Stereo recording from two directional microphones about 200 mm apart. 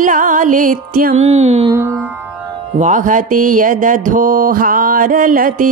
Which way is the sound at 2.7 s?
40° right (ahead or behind).